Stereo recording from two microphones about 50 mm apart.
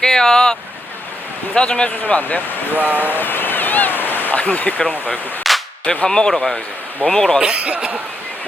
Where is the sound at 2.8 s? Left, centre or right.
Right.